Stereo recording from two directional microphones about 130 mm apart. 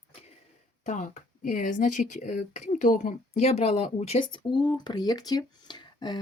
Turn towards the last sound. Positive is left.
turn(degrees=35)  # may be behind; listen again after turning